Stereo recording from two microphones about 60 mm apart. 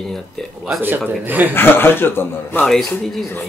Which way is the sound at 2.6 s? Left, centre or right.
Centre.